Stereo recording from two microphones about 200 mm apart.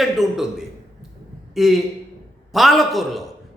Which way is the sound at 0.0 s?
Centre (ahead or behind).